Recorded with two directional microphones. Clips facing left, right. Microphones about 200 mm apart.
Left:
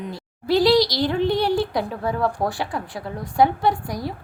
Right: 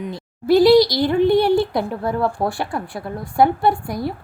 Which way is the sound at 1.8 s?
10° right (ahead or behind).